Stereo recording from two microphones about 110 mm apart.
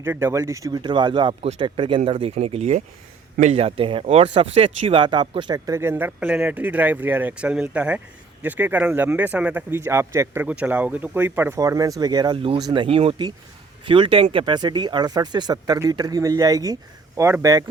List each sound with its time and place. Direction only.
0.0 s speech: 20° right (ahead or behind)
0.8 s speech: 45° right (ahead or behind)
2.3 s speech: 75° right (ahead or behind)
3.4 s speech: 65° right (ahead or behind)
4.0 s speech: 70° right (ahead or behind); by 5.5 s 50° right (ahead or behind)
5.5 s speech: 30° right (ahead or behind)
10.4 s speech: 10° right (ahead or behind)
11.6 s speech: 35° right (ahead or behind)
12.7 s speech: 50° right (ahead or behind); by 17.7 s 35° right (ahead or behind)